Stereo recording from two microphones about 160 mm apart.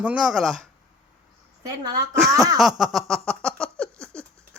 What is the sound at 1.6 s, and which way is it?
Speech, 25° right (ahead or behind).